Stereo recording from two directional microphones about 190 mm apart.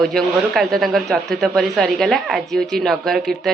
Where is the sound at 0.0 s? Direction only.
Centre (ahead or behind).